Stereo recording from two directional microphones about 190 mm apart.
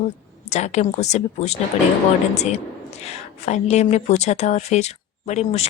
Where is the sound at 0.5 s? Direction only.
35° left (ahead or behind).